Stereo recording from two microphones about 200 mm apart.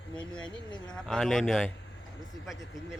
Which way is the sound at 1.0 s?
Centre (ahead or behind).